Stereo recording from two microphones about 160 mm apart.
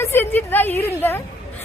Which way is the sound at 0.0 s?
15° left (ahead or behind).